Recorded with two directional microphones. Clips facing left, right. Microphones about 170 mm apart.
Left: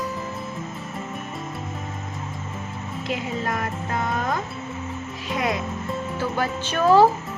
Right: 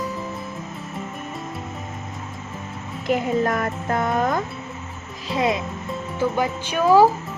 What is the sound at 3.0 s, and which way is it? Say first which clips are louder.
Speech: right 7 dB; 50° right (ahead or behind).